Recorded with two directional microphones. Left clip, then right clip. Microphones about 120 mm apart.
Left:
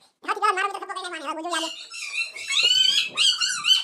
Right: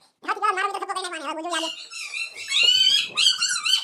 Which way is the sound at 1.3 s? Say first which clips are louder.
Even; centre (ahead or behind).